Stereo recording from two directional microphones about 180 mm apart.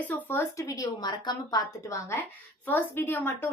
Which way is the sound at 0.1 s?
10° left (ahead or behind).